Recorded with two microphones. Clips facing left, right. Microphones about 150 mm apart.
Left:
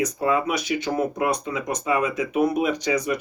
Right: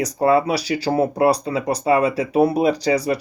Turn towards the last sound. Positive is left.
turn(degrees=-35)  # may be behind; listen again after turning